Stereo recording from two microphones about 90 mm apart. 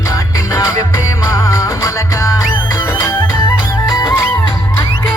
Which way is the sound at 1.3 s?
35° left (ahead or behind).